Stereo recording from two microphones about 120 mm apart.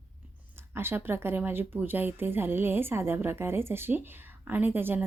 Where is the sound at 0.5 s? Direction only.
20° right (ahead or behind).